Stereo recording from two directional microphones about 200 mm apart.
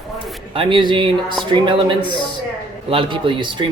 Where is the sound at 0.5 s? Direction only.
25° right (ahead or behind).